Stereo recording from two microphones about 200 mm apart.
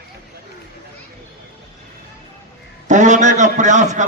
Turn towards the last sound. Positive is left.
turn(degrees=-35)  # may be behind; listen again after turning